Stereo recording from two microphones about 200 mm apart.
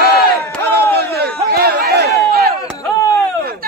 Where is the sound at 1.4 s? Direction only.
50° right (ahead or behind).